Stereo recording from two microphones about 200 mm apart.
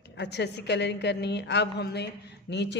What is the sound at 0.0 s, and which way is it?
A woman's voice, 60° left (ahead or behind).